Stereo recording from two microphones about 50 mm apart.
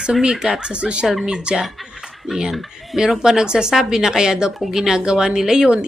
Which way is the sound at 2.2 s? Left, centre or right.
Centre.